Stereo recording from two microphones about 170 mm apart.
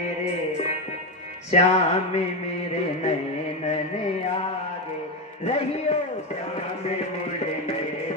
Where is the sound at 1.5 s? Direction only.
40° left (ahead or behind).